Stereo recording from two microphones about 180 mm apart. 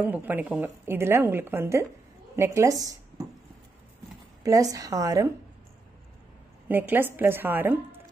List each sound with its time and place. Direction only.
0.0 s a woman's voice: 10° right (ahead or behind)
4.4 s a woman's voice: 20° right (ahead or behind)
6.7 s a woman's voice: 10° right (ahead or behind)